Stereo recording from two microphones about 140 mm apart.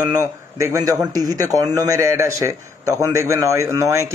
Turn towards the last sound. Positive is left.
turn(degrees=-20)  # may be behind; listen again after turning